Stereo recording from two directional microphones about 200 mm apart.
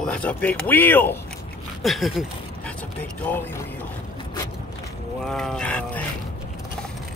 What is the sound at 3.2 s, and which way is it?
Speech, 10° left (ahead or behind).